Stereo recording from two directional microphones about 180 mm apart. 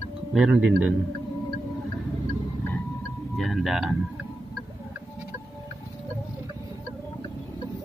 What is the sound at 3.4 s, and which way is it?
Speech, centre (ahead or behind).